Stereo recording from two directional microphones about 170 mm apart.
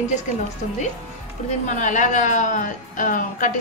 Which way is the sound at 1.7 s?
45° left (ahead or behind).